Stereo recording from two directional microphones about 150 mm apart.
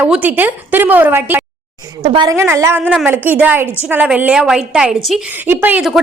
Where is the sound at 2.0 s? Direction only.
35° right (ahead or behind).